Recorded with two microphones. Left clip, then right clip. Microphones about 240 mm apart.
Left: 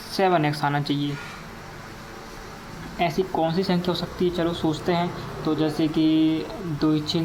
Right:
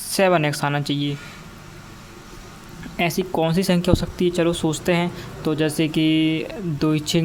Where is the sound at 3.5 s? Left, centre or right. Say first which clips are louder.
Right 4 dB; right.